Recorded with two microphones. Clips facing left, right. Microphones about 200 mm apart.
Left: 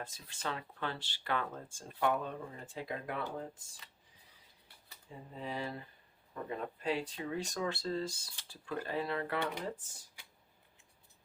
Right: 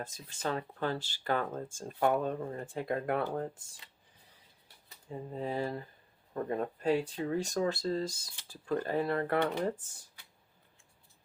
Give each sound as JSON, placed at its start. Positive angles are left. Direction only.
{"t": 0.0, "sound": "speech", "side_deg": -40}
{"t": 5.3, "sound": "speech", "side_deg": -40}